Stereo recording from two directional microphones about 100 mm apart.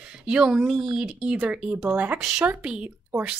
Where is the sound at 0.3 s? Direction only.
10° right (ahead or behind).